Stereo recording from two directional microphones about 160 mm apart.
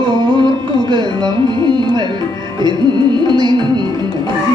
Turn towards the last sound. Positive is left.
turn(degrees=-30)  # may be behind; listen again after turning